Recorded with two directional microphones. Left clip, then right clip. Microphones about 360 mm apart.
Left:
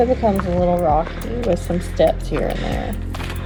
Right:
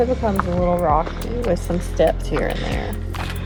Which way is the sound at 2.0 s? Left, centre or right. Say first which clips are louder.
Left 1 dB; centre.